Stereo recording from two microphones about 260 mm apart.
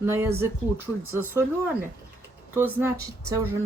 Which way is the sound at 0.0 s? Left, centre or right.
Centre.